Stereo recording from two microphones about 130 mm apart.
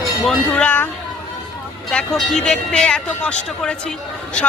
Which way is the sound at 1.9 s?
5° left (ahead or behind).